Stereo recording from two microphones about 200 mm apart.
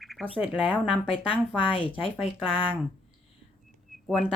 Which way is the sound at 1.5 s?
25° left (ahead or behind).